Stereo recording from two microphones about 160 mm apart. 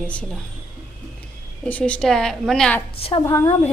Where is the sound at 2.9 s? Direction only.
35° left (ahead or behind).